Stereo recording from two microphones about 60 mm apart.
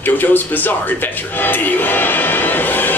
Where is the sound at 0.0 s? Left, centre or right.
Left.